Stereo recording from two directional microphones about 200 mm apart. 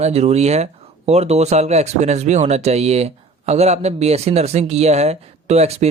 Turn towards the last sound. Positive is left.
turn(degrees=-30)  # may be behind; listen again after turning